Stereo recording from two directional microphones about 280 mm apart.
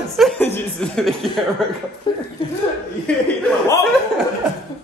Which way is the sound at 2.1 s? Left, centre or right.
Centre.